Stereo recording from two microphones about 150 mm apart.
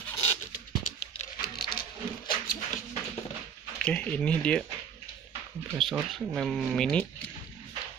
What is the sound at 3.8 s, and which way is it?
Speech, 10° left (ahead or behind).